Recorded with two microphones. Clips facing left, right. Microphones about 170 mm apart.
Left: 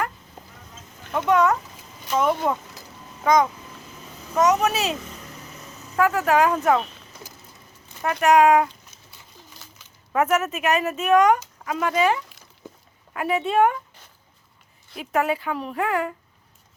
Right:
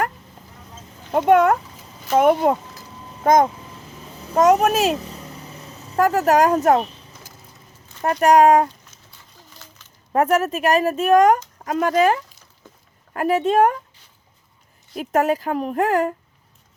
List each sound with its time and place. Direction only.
1.1 s a woman's voice: 50° right (ahead or behind)
6.0 s speech: 40° right (ahead or behind)
8.0 s speech: 40° right (ahead or behind)
10.1 s speech: 35° right (ahead or behind)
14.9 s a woman's voice: 45° right (ahead or behind)